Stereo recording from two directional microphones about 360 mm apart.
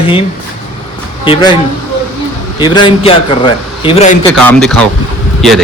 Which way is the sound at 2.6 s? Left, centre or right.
Centre.